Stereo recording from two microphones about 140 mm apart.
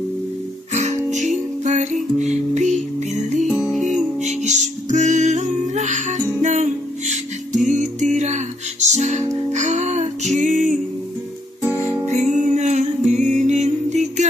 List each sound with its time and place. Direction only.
0.7 s music: 55° right (ahead or behind)
3.4 s music: 5° right (ahead or behind)
3.8 s music: 55° right (ahead or behind)
12.1 s music: 55° right (ahead or behind)